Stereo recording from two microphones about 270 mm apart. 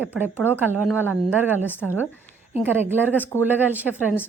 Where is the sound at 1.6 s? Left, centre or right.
Centre.